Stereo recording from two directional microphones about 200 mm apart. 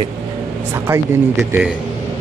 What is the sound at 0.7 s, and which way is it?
A man's voice, 10° right (ahead or behind).